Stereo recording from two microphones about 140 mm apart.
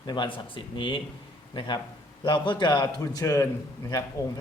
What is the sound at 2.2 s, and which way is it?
A man's voice, 35° left (ahead or behind).